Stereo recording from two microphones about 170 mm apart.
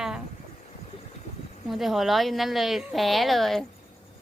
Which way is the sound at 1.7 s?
Centre (ahead or behind).